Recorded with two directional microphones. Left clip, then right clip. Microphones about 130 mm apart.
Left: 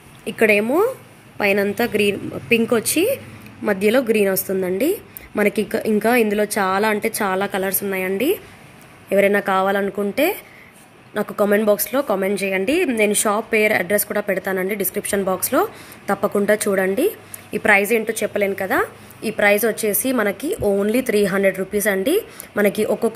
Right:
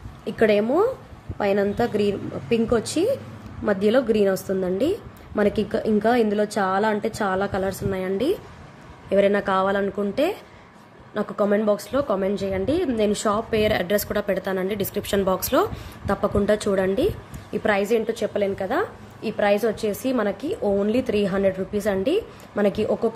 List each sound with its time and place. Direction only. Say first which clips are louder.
0.2 s speech: left 3 dB; centre (ahead or behind); by 23.1 s 20° left (ahead or behind)